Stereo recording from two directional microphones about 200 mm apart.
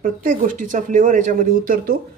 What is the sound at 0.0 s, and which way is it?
Speech, 40° right (ahead or behind).